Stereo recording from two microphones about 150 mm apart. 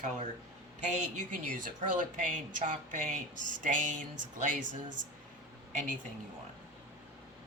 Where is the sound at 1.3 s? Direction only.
60° right (ahead or behind).